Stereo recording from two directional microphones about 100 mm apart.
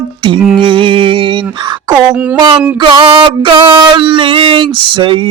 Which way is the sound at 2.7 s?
60° right (ahead or behind).